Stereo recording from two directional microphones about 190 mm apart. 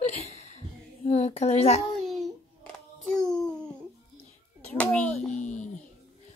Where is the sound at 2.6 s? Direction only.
Centre (ahead or behind).